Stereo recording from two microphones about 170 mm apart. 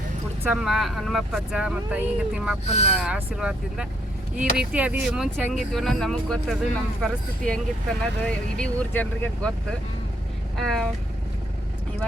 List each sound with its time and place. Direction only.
0.5 s speech: 5° right (ahead or behind)
2.6 s speech: 40° left (ahead or behind)
3.0 s speech: 5° right (ahead or behind)
10.6 s speech: centre (ahead or behind)